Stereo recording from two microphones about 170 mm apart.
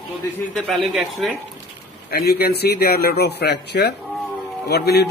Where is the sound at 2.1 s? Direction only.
65° left (ahead or behind).